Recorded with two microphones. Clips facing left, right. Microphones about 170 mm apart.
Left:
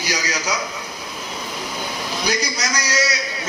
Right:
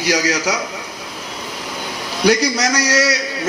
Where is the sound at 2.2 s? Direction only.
80° right.